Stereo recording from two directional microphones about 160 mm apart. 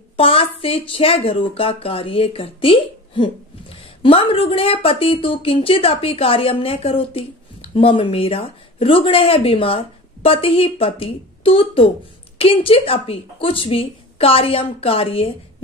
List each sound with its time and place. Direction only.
0.2 s speech: 35° left (ahead or behind)